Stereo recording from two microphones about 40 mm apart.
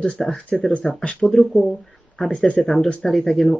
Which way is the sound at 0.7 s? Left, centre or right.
Left.